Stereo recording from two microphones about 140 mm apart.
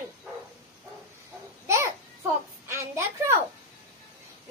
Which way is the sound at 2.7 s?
20° right (ahead or behind).